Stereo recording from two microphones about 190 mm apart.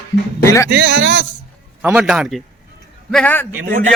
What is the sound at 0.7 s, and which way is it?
Speech, 70° right (ahead or behind).